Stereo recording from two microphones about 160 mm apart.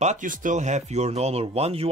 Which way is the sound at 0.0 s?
50° right (ahead or behind).